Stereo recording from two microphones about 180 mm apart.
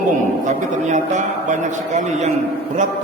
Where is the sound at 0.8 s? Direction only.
40° right (ahead or behind).